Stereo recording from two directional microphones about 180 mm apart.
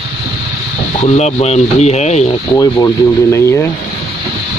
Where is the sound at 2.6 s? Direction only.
20° left (ahead or behind).